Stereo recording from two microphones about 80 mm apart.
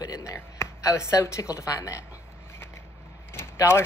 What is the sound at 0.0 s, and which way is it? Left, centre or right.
Speech, left.